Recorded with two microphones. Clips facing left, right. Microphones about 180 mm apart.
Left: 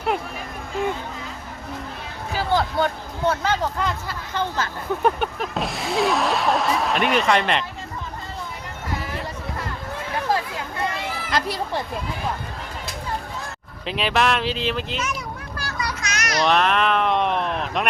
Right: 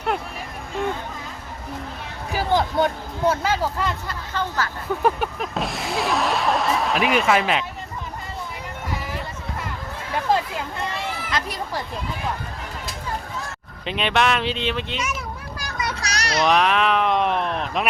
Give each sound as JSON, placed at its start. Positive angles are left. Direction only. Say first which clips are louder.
{"t": 2.3, "sound": "a sound", "louder": "right 1 dB", "side_deg": -15}
{"t": 3.2, "sound": "speech", "louder": "right 1 dB", "side_deg": -5}
{"t": 4.4, "sound": "speech", "louder": "even", "side_deg": 20}
{"t": 5.0, "sound": "snicker", "louder": "even", "side_deg": 0}
{"t": 11.3, "sound": "children playing", "louder": "left 6 dB", "side_deg": 35}
{"t": 13.8, "sound": "snicker", "louder": "even", "side_deg": 0}
{"t": 15.5, "sound": "vehicle", "louder": "even", "side_deg": -20}
{"t": 16.0, "sound": "children playing", "louder": "right 1 dB", "side_deg": -35}
{"t": 16.4, "sound": "snicker", "louder": "right 1 dB", "side_deg": 0}